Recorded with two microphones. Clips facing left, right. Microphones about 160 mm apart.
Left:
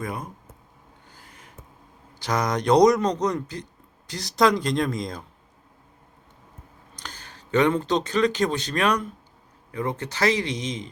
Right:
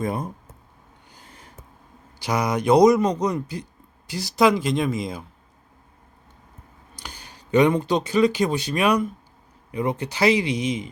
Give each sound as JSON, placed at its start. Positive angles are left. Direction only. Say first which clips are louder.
{"t": 0.0, "sound": "speech", "louder": "right 6 dB", "side_deg": -30}
{"t": 1.1, "sound": "a sound", "louder": "right 3 dB", "side_deg": -25}
{"t": 2.1, "sound": "a man's voice", "louder": "right 1 dB", "side_deg": -10}
{"t": 6.9, "sound": "a man's voice", "louder": "right 1 dB", "side_deg": -10}